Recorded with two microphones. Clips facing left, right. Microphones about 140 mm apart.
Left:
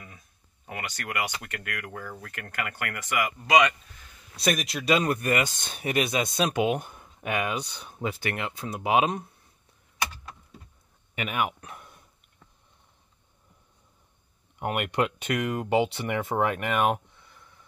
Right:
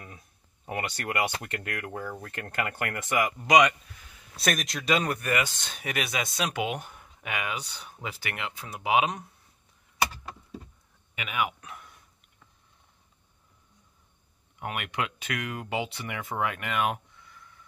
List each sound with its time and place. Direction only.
0.7 s speech: 30° right (ahead or behind)
4.4 s a man's voice: centre (ahead or behind)
5.0 s speech: 30° left (ahead or behind)
11.1 s speech: 40° left (ahead or behind)
14.7 s speech: 45° left (ahead or behind)